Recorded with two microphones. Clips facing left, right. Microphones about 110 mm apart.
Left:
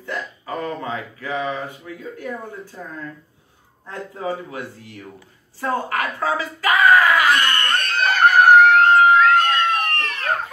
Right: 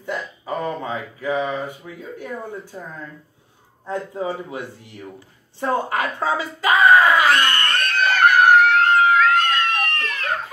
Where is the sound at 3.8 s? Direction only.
20° right (ahead or behind).